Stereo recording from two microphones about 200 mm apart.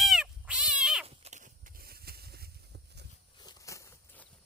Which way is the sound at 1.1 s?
35° right (ahead or behind).